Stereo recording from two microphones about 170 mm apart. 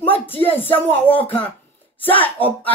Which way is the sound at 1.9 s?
30° left (ahead or behind).